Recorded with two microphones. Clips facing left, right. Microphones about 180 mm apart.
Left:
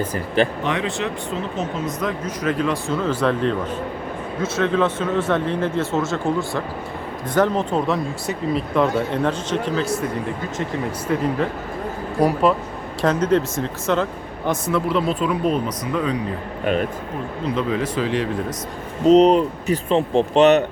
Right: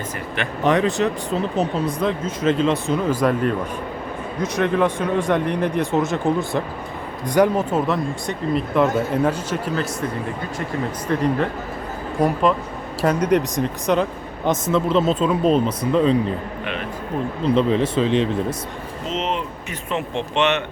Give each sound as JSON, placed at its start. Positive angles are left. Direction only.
{"t": 0.6, "sound": "speech", "side_deg": -40}
{"t": 11.1, "sound": "speech", "side_deg": 5}
{"t": 13.0, "sound": "speech", "side_deg": -10}
{"t": 17.4, "sound": "speech", "side_deg": -30}
{"t": 19.0, "sound": "speech", "side_deg": 40}